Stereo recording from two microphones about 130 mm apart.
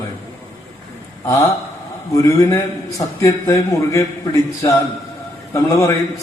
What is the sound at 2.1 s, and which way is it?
A man's voice, 25° left (ahead or behind).